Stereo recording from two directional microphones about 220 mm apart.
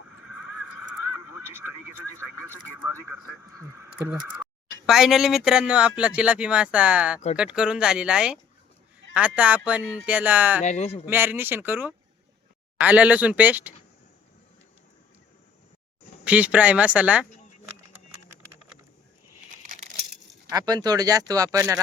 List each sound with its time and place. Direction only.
0.2 s horse: 90° left
2.1 s speech: 10° right (ahead or behind)
10.6 s speech: 30° left (ahead or behind)
11.0 s speech: 10° right (ahead or behind)
16.2 s speech: 5° right (ahead or behind)
19.6 s a sound: 35° right (ahead or behind)
20.5 s speech: 15° right (ahead or behind)